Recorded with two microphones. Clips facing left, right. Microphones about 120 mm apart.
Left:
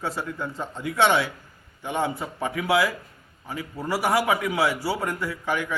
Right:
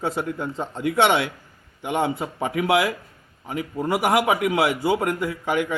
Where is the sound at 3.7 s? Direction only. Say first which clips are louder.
Right 3 dB; 20° right (ahead or behind).